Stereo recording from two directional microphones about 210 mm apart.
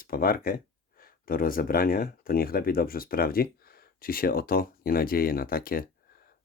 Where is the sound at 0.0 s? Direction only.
45° left (ahead or behind).